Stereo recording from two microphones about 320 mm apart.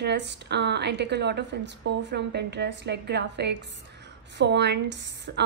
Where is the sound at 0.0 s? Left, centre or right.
Right.